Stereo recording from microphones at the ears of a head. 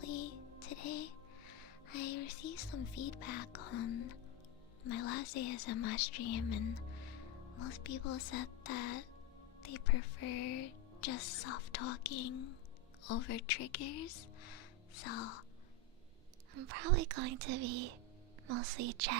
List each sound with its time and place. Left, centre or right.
0.0 s music: left
4.8 s a woman's voice: left
16.6 s speech: right